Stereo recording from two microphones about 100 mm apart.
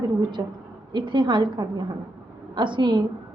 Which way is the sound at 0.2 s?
50° right (ahead or behind).